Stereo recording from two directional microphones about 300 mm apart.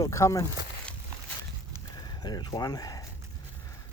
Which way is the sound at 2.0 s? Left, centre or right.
Centre.